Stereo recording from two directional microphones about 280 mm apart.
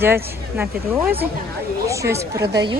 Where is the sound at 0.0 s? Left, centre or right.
Centre.